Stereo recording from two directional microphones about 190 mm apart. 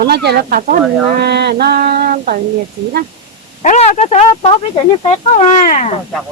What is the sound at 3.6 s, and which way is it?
Speech, 40° left (ahead or behind).